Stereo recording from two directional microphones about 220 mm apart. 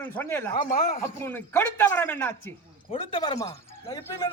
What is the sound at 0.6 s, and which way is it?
Speech, 35° left (ahead or behind).